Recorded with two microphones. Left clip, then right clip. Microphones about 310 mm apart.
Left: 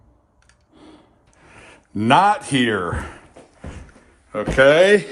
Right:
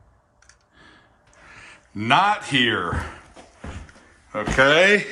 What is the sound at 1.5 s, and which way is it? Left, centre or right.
A man's voice, centre.